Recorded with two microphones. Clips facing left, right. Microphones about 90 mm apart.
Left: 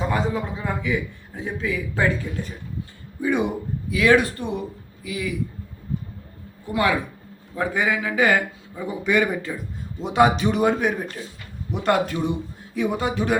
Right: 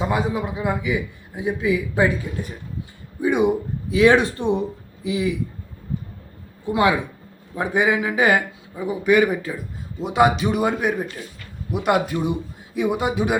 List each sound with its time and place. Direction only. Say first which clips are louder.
0.0 s a man's voice: right 1 dB; 10° right (ahead or behind)
6.7 s a man's voice: right 3 dB; 20° right (ahead or behind)